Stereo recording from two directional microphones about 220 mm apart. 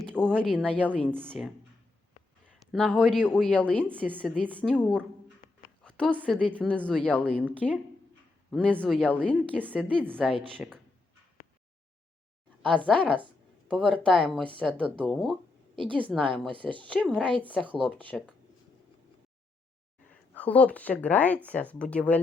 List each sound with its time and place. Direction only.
0.0 s speech: centre (ahead or behind)
2.6 s speech: 5° left (ahead or behind)
5.8 s a sound: 5° left (ahead or behind)
6.2 s speech: 5° left (ahead or behind)
10.0 s speech: 5° right (ahead or behind)
12.6 s speech: 5° left (ahead or behind)
15.7 s a woman's voice: 20° right (ahead or behind)
16.0 s speech: centre (ahead or behind)
20.3 s speech: 5° left (ahead or behind)